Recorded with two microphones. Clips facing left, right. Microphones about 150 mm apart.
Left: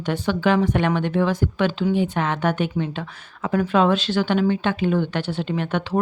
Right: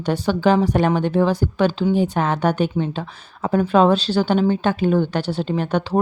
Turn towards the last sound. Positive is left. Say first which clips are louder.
# right 3 dB
turn(degrees=-35)  # may be behind; listen again after turning